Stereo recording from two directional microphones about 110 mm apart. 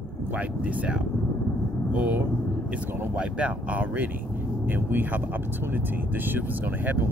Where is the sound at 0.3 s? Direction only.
15° right (ahead or behind).